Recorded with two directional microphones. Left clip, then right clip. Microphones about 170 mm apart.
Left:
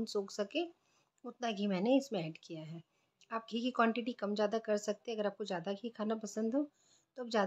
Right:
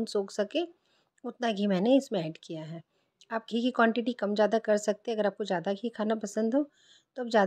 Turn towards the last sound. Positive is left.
turn(degrees=-40)  # may be behind; listen again after turning